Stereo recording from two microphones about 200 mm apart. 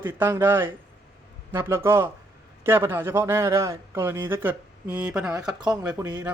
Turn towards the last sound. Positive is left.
turn(degrees=-10)  # may be behind; listen again after turning